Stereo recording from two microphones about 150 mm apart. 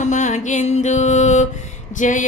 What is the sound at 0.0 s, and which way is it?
Music, 55° left (ahead or behind).